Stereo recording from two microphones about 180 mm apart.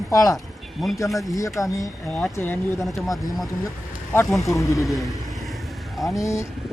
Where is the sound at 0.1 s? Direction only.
20° left (ahead or behind).